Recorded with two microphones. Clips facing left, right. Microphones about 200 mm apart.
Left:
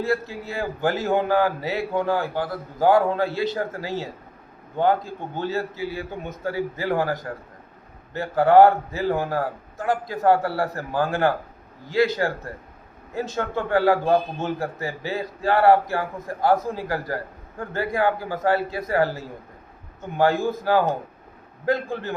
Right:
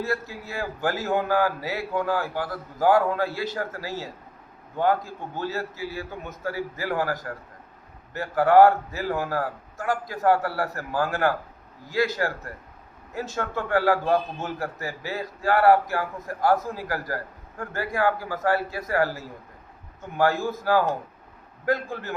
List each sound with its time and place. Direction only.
0.0 s a man's voice: 30° left (ahead or behind)
5.3 s a man's voice: 25° left (ahead or behind)